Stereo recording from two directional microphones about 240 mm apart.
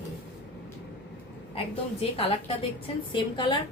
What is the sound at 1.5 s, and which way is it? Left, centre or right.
A woman's voice, left.